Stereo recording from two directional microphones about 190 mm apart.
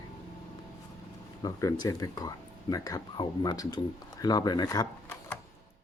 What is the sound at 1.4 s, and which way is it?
Speech, 15° left (ahead or behind).